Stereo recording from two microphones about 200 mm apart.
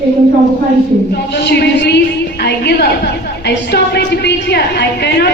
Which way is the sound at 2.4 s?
55° left (ahead or behind).